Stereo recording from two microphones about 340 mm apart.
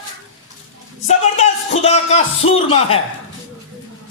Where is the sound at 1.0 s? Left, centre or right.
Centre.